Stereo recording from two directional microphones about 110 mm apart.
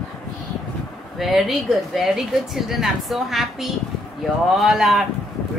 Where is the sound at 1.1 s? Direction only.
Centre (ahead or behind).